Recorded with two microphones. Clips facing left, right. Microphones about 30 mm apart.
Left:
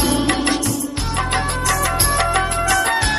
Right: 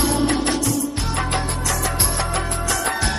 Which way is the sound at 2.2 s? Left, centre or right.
Left.